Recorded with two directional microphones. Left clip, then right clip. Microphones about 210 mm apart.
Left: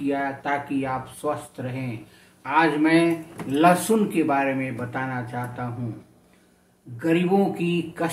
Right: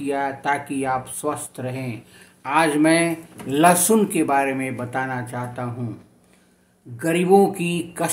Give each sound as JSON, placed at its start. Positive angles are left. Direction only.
{"t": 0.0, "sound": "speech", "side_deg": -50}
{"t": 7.0, "sound": "speech", "side_deg": -50}